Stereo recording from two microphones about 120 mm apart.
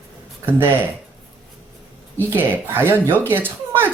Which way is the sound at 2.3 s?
20° right (ahead or behind).